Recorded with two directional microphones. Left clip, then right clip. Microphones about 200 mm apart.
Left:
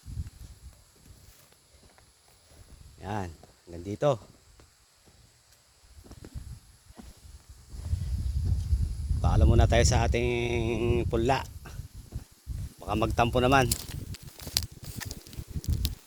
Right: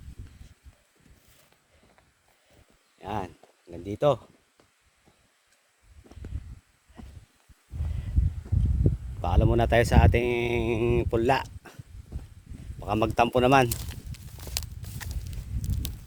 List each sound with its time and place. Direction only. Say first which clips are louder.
3.0 s speech: right 2 dB; 5° right (ahead or behind)
9.2 s speech: right 3 dB; 15° right (ahead or behind)
12.8 s speech: right 3 dB; 25° right (ahead or behind)
13.7 s walk: left 2 dB; 5° left (ahead or behind)